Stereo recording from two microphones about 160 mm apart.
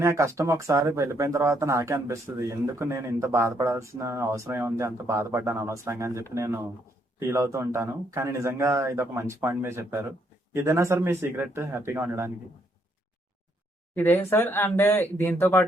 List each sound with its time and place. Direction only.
0.0 s speech: 15° right (ahead or behind)
13.9 s speech: 10° left (ahead or behind)